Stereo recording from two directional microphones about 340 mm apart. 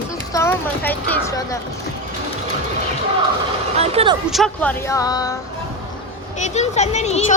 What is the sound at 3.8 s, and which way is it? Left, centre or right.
Speech, centre.